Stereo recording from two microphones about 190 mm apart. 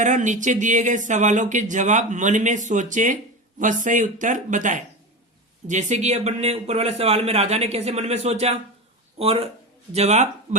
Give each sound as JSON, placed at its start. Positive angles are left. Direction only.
{"t": 0.0, "sound": "speech", "side_deg": -40}